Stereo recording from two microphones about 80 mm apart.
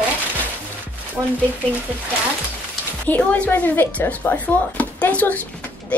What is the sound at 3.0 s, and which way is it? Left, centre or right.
Speech, centre.